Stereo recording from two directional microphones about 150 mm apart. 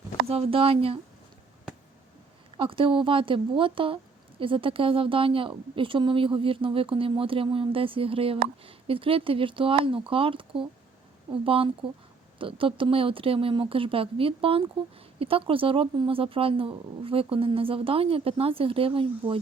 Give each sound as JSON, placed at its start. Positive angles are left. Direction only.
{"t": 0.3, "sound": "a woman's voice", "side_deg": -40}
{"t": 2.6, "sound": "a woman's voice", "side_deg": -35}